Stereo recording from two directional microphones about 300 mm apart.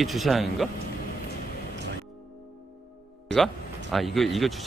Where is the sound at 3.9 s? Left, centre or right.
Centre.